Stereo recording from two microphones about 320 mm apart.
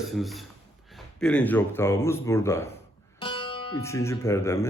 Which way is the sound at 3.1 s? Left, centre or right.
Centre.